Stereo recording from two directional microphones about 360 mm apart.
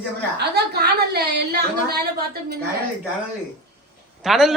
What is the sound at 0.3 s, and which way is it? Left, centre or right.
A woman's voice, right.